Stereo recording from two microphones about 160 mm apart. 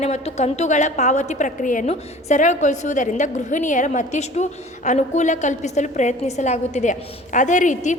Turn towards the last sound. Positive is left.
turn(degrees=50)  # may be behind; listen again after turning